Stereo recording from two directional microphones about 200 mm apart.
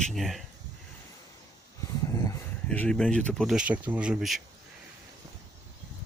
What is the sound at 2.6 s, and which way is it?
Speech, 5° left (ahead or behind).